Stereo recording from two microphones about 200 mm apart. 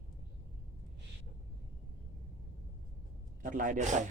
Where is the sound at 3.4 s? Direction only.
40° right (ahead or behind).